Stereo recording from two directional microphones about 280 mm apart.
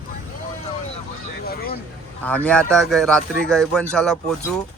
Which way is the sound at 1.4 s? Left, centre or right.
Left.